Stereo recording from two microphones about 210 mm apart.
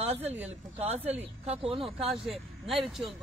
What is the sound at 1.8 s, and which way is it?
Speech, centre (ahead or behind).